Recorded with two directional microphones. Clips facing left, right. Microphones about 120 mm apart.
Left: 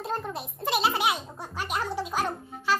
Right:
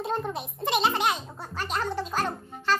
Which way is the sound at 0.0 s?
Centre (ahead or behind).